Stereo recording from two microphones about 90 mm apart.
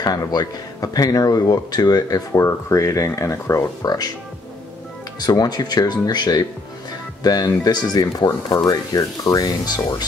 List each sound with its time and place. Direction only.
0.0 s speech: 45° left (ahead or behind)
5.2 s speech: 50° left (ahead or behind)